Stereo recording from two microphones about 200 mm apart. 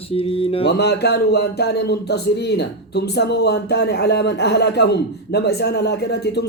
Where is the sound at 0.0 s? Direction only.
30° left (ahead or behind).